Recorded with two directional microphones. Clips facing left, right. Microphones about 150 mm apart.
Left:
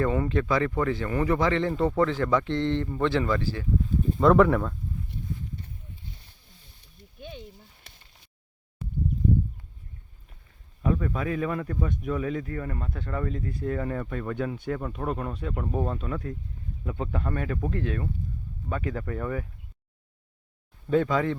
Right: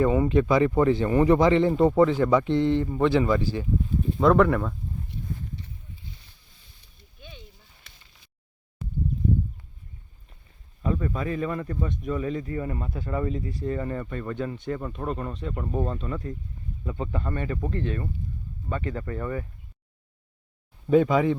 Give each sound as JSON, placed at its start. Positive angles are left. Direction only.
{"t": 0.0, "sound": "speech", "side_deg": -15}
{"t": 4.2, "sound": "speech", "side_deg": 0}
{"t": 7.2, "sound": "a sound", "side_deg": 50}
{"t": 10.8, "sound": "speech", "side_deg": 0}
{"t": 20.9, "sound": "speech", "side_deg": -15}